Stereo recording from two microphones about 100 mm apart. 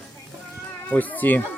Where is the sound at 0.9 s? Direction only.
15° left (ahead or behind).